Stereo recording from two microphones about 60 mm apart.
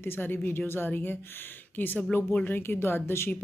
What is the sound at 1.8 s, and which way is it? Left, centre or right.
Speech, left.